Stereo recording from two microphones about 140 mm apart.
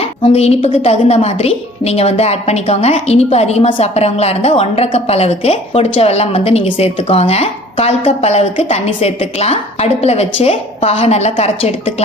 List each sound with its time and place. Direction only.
0.0 s a woman's voice: 45° left (ahead or behind)